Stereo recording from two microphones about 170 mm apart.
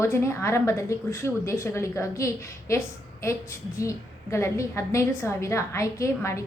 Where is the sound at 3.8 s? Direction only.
15° left (ahead or behind).